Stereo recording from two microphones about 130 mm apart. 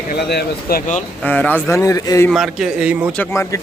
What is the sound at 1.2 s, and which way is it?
Speech, 15° left (ahead or behind).